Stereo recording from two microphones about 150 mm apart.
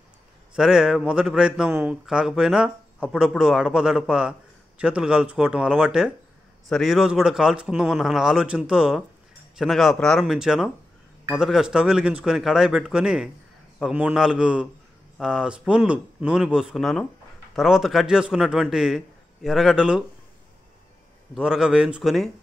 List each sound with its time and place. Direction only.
0.6 s a man's voice: 5° right (ahead or behind)
21.4 s a man's voice: 5° right (ahead or behind)